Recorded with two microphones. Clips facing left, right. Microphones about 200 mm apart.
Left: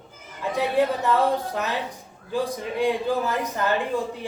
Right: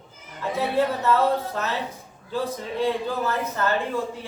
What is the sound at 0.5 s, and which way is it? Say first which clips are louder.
Speech: left 1 dB; 15° left (ahead or behind).